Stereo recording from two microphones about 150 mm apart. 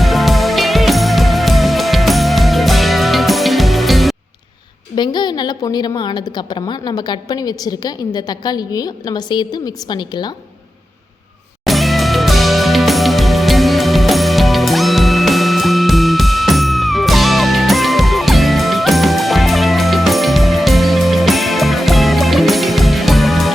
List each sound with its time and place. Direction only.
0.0 s music: centre (ahead or behind)
4.9 s a woman's voice: 30° left (ahead or behind)
11.6 s music: centre (ahead or behind)